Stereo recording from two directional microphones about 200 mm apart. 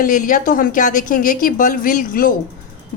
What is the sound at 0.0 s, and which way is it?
A woman's voice, 40° left (ahead or behind).